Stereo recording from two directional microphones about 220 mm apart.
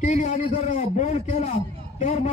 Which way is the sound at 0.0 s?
30° left (ahead or behind).